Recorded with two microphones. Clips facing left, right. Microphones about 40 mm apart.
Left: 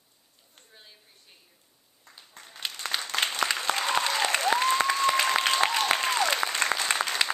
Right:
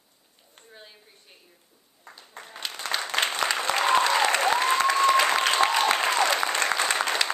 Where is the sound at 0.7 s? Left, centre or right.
Centre.